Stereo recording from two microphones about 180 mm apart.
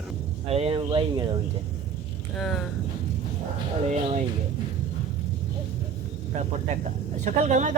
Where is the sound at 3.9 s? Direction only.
40° right (ahead or behind).